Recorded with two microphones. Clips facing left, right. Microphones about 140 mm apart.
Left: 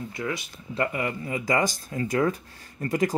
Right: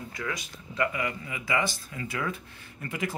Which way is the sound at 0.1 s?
25° left (ahead or behind).